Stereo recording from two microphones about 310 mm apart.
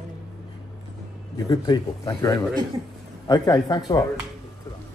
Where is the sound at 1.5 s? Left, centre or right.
Centre.